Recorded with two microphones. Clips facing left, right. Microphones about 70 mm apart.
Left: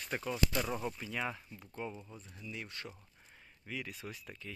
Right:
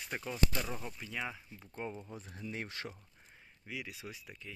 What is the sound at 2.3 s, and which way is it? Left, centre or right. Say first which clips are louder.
Speech: right 3 dB; right.